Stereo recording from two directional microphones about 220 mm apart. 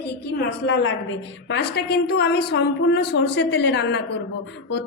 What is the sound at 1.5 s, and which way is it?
A woman's voice, 45° left (ahead or behind).